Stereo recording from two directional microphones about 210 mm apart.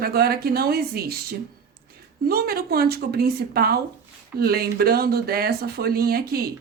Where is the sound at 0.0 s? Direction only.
45° right (ahead or behind).